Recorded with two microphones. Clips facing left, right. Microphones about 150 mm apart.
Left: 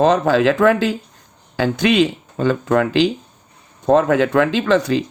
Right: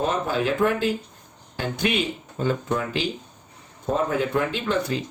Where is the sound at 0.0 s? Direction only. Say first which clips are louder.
Left 10 dB; 90° left.